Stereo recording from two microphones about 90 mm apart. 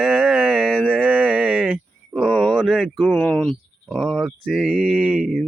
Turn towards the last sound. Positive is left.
turn(degrees=5)  # may be behind; listen again after turning